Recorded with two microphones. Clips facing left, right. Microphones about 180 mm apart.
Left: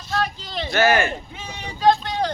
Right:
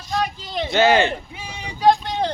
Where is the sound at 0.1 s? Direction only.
15° right (ahead or behind).